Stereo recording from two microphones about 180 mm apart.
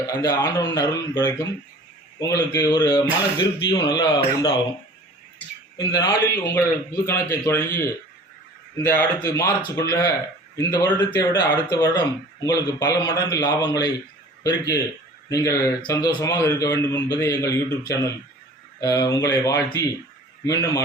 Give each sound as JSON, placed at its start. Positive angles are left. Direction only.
{"t": 0.1, "sound": "speech", "side_deg": 20}
{"t": 5.7, "sound": "a man's voice", "side_deg": 20}